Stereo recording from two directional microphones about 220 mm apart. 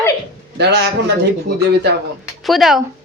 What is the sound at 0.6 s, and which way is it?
A man's voice, 50° right (ahead or behind).